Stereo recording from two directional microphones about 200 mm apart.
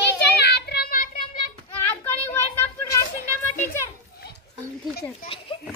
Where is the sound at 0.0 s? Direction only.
55° left (ahead or behind).